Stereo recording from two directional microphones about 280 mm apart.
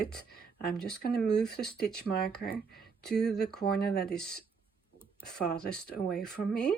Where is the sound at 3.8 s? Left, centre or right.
Left.